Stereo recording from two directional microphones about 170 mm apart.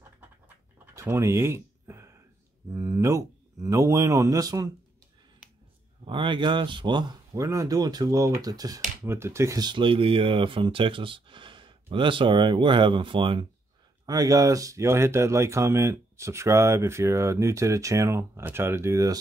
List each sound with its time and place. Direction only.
0.9 s a sound: 15° right (ahead or behind)
2.7 s speech: 15° right (ahead or behind)
6.0 s speech: 30° right (ahead or behind)